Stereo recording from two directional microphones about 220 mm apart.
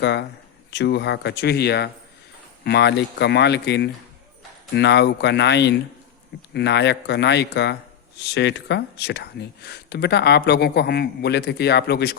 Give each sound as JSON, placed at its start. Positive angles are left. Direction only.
{"t": 0.0, "sound": "speech", "side_deg": 50}